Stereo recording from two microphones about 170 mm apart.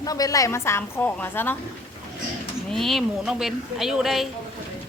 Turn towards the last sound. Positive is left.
turn(degrees=0)  # may be behind; listen again after turning